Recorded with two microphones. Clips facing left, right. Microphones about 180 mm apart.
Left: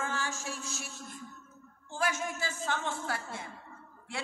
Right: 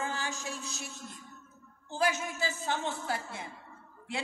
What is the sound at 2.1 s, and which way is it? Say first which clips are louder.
A woman's voice: even; 20° right (ahead or behind).